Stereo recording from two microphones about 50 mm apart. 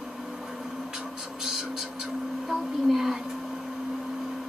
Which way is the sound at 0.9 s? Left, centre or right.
Centre.